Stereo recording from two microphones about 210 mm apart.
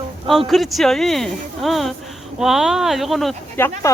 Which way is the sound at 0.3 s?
Centre (ahead or behind).